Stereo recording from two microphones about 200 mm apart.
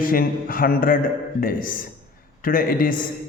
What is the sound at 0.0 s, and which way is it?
A man's voice, 45° left (ahead or behind).